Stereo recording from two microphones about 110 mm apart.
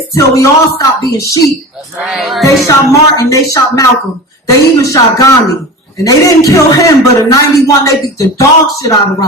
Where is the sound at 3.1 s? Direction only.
30° left (ahead or behind).